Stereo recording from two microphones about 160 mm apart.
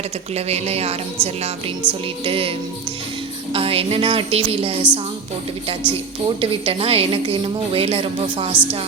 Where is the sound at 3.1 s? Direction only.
35° right (ahead or behind).